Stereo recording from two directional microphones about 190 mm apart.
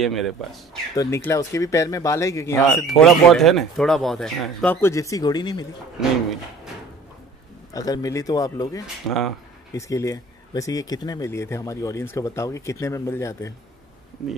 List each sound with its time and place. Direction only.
0.0 s speech: centre (ahead or behind)
0.9 s speech: 15° left (ahead or behind)
2.9 s speech: centre (ahead or behind)
4.8 s speech: 15° left (ahead or behind)
7.7 s speech: 20° left (ahead or behind)
8.8 s speech: centre (ahead or behind)
9.8 s speech: 15° left (ahead or behind)
14.2 s speech: centre (ahead or behind)